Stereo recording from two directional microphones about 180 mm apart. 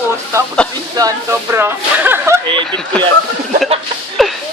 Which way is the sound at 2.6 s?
5° left (ahead or behind).